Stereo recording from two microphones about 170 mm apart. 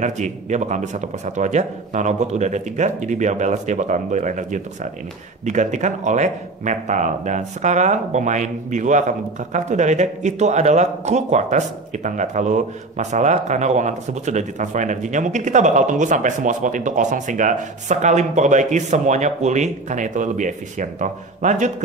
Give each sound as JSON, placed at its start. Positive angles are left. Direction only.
{"t": 0.0, "sound": "speech", "side_deg": -45}